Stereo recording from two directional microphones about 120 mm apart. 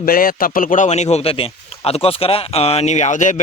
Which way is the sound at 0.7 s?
80° left.